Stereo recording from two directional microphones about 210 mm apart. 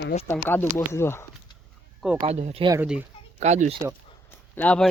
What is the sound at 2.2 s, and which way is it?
Speech, 30° right (ahead or behind).